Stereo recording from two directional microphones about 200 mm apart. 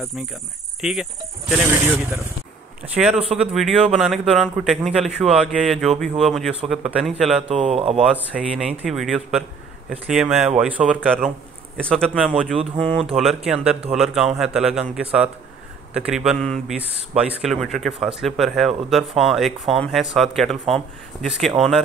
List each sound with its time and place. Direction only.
0.7 s speech: 5° right (ahead or behind)
7.4 s speech: 30° right (ahead or behind)
7.9 s speech: centre (ahead or behind)
11.7 s speech: 5° left (ahead or behind)